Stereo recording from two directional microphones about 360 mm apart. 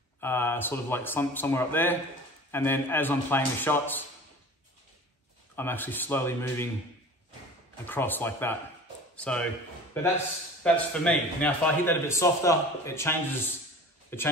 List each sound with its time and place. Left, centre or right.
0.2 s a man's voice: centre
5.6 s a man's voice: centre
7.8 s a man's voice: centre